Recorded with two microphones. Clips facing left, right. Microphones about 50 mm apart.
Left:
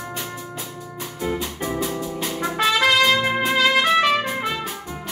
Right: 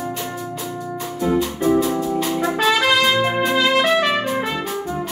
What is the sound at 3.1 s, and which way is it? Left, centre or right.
Trumpet, centre.